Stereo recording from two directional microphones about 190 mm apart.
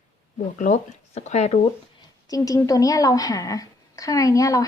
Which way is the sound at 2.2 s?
20° left (ahead or behind).